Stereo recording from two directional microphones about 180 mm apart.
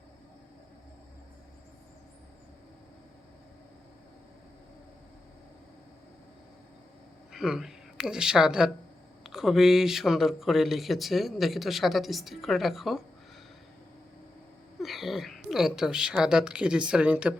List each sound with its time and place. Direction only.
7.3 s speech: centre (ahead or behind)
14.8 s speech: centre (ahead or behind)